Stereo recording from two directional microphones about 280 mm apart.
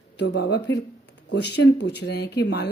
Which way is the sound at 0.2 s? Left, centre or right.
Left.